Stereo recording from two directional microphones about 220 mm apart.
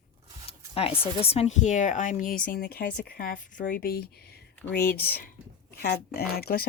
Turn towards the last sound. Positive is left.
turn(degrees=45)  # may be behind; listen again after turning